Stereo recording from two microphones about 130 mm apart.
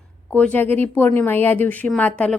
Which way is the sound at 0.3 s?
10° left (ahead or behind).